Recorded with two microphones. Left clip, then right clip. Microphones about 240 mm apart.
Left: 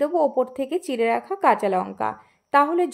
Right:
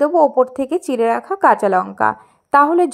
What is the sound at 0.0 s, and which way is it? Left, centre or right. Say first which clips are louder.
A woman's voice: right 8 dB; centre.